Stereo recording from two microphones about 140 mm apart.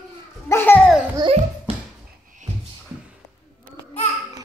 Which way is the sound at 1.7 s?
45° right (ahead or behind).